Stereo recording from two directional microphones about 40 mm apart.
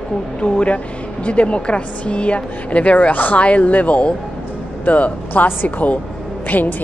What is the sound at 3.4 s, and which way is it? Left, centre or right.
A woman's voice, left.